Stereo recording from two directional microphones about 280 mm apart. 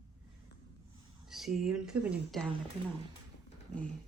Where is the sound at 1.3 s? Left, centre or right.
Centre.